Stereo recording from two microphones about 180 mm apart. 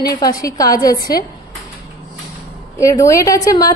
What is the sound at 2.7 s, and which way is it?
Speech, 15° left (ahead or behind).